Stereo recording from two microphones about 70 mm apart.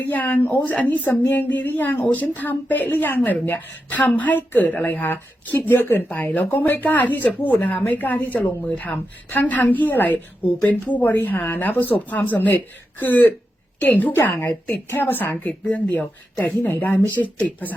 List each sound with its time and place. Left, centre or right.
0.0 s speech: left
14.1 s a woman's voice: left
16.6 s speech: left